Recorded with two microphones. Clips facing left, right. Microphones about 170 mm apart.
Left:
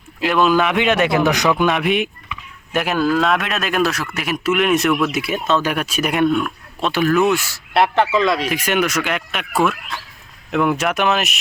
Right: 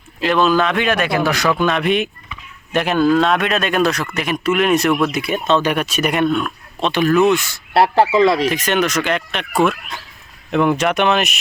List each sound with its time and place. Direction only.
0.2 s a man's voice: 5° left (ahead or behind)
2.7 s a man's voice: 5° left (ahead or behind)
7.7 s speech: 30° right (ahead or behind)
8.4 s a man's voice: 10° left (ahead or behind)